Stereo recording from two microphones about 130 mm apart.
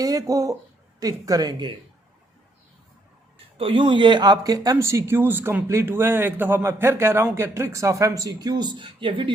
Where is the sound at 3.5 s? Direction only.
45° right (ahead or behind).